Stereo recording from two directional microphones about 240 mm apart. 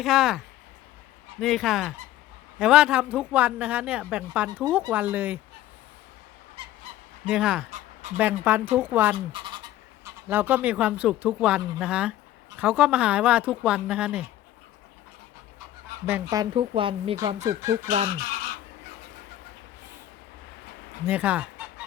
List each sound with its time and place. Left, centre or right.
0.0 s speech: centre
6.6 s goose: right
7.3 s speech: centre
7.7 s a sound: right
8.2 s speech: centre
9.1 s speech: right
10.0 s speech: centre
16.3 s speech: centre
17.4 s speech: centre
17.8 s speech: right
21.1 s fowl: centre